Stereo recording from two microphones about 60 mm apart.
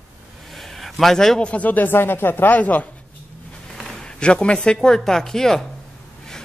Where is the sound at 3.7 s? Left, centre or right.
Centre.